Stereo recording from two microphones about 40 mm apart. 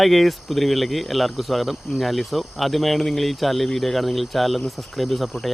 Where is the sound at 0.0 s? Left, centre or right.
Centre.